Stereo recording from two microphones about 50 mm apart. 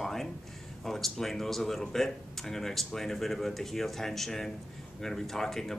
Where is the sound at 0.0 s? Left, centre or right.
Centre.